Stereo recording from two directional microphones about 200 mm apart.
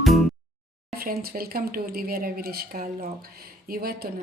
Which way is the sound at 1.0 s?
45° right (ahead or behind).